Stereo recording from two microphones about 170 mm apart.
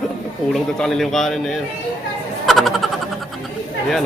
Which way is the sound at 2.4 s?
Centre (ahead or behind).